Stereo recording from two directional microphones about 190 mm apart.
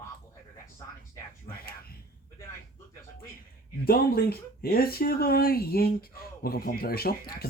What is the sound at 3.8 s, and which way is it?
Speech, 55° left (ahead or behind).